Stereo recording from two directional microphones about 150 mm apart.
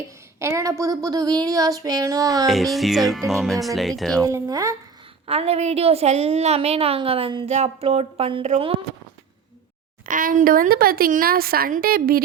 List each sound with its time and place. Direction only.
0.3 s speech: 20° right (ahead or behind)
2.5 s music: centre (ahead or behind)
4.2 s speech: 20° right (ahead or behind)
5.2 s a woman's voice: 40° right (ahead or behind)
10.1 s a woman's voice: 65° right (ahead or behind); by 12.2 s 80° right